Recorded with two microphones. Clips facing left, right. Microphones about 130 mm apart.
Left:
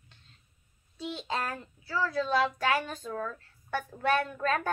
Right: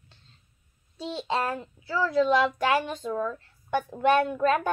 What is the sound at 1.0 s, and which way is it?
A child's voice, 25° right (ahead or behind).